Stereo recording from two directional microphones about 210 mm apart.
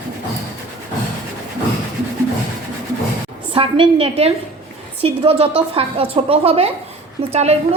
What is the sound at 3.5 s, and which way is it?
A woman's voice, 25° right (ahead or behind).